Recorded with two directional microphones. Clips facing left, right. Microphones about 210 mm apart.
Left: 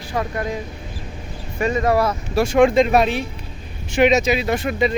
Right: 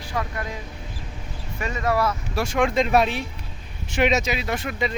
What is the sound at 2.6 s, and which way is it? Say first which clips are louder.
Speech: left 5 dB; 20° left (ahead or behind).